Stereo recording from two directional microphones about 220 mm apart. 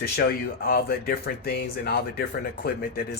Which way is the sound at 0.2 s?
45° left (ahead or behind).